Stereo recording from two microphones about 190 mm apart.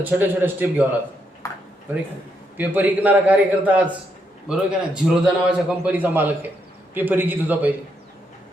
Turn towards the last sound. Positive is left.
turn(degrees=-10)  # may be behind; listen again after turning